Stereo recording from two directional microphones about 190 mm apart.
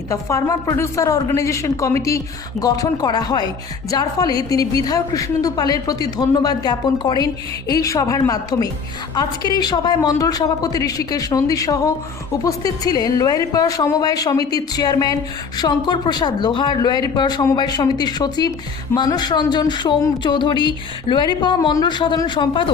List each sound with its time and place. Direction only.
0.1 s speech: 15° left (ahead or behind)